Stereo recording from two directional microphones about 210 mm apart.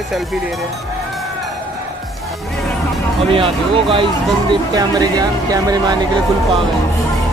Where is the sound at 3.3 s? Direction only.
25° right (ahead or behind).